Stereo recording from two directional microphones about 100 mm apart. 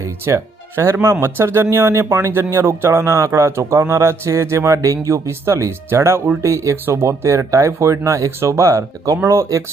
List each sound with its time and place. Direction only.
0.0 s music: 30° right (ahead or behind)
1.0 s speech: 25° right (ahead or behind)